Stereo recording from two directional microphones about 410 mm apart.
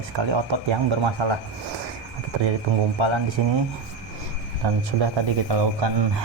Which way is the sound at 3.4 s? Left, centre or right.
Right.